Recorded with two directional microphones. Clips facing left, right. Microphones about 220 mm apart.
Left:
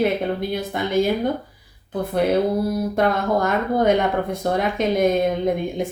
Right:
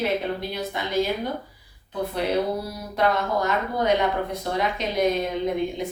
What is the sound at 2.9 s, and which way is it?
A woman's voice, 50° left (ahead or behind).